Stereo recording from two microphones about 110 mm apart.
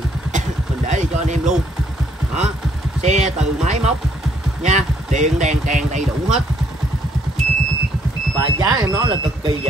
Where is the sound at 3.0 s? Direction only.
90° right.